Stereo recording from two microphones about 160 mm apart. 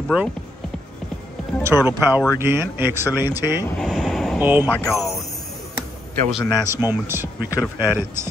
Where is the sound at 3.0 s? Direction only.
20° left (ahead or behind).